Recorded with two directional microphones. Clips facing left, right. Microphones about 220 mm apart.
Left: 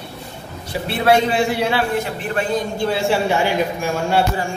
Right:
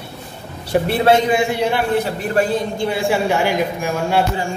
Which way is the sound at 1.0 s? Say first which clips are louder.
Left 2 dB; 15° right (ahead or behind).